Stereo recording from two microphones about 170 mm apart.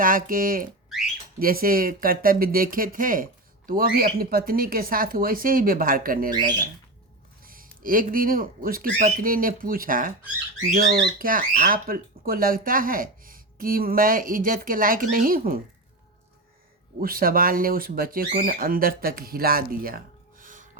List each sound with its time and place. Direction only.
0.0 s speech: 55° right (ahead or behind)
7.4 s speech: 55° right (ahead or behind)
17.0 s speech: 60° right (ahead or behind)